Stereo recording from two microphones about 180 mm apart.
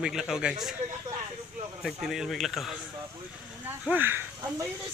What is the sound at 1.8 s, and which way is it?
Speech, centre (ahead or behind).